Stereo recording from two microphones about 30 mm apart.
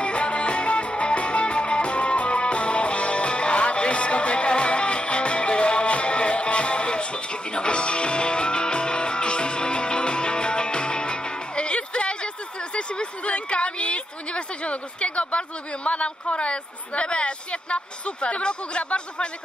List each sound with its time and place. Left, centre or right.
0.0 s music: left
12.7 s speech: left